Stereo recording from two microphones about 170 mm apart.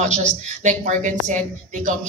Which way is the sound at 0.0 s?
45° right (ahead or behind).